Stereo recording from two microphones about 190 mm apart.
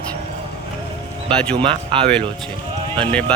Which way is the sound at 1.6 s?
25° right (ahead or behind).